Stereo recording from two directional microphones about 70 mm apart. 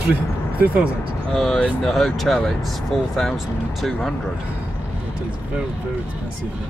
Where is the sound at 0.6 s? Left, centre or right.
Centre.